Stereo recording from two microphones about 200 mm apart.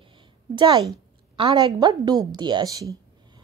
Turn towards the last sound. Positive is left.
turn(degrees=-15)  # may be behind; listen again after turning